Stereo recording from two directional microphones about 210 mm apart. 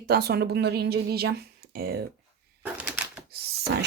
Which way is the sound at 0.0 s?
50° right (ahead or behind).